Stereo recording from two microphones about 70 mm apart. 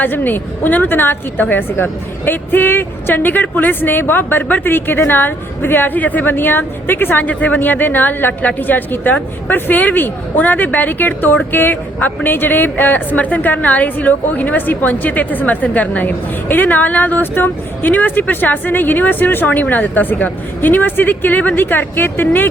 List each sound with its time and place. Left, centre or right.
0.0 s a woman's voice: left